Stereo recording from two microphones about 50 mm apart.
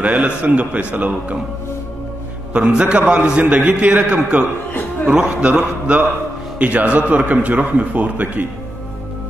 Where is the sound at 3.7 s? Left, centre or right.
Right.